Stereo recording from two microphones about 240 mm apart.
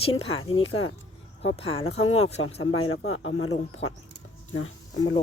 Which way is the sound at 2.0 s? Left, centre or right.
Left.